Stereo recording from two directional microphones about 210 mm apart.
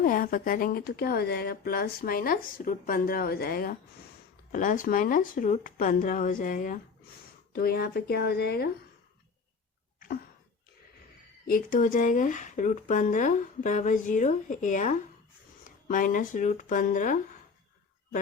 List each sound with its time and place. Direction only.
0.0 s speech: 40° left (ahead or behind)
11.4 s speech: 40° left (ahead or behind)